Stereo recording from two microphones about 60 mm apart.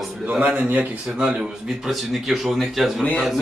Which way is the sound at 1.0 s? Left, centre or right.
Centre.